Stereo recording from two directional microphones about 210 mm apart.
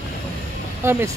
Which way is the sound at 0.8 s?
10° right (ahead or behind).